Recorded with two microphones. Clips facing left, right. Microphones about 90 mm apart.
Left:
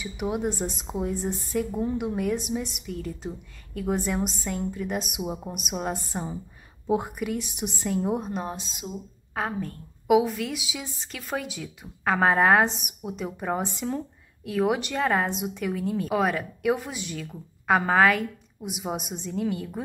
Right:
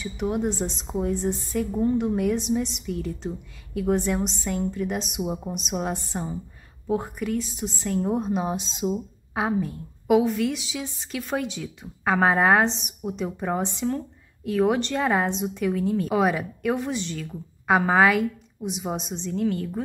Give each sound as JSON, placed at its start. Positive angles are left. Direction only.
{"t": 0.0, "sound": "a woman's voice", "side_deg": 5}
{"t": 6.9, "sound": "a woman's voice", "side_deg": 15}
{"t": 7.9, "sound": "a woman's voice", "side_deg": 5}
{"t": 8.5, "sound": "speech", "side_deg": -20}
{"t": 9.3, "sound": "a woman's voice", "side_deg": -10}
{"t": 10.0, "sound": "a woman's voice", "side_deg": 0}
{"t": 17.3, "sound": "a woman's voice", "side_deg": -5}